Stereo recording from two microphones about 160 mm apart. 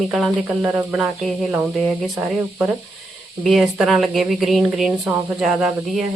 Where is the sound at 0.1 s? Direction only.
Centre (ahead or behind).